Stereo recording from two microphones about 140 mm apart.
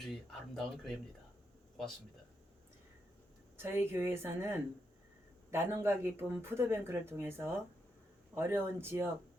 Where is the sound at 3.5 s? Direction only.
15° right (ahead or behind).